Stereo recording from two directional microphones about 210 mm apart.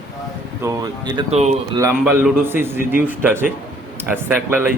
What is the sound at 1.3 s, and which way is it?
Speech, 30° right (ahead or behind).